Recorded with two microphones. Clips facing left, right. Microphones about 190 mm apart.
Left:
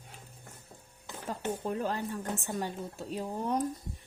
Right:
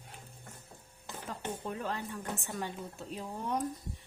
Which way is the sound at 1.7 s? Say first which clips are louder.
Left 4 dB; 35° left (ahead or behind).